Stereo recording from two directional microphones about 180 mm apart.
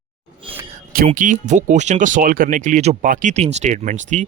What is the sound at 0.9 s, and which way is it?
Speech, 45° right (ahead or behind).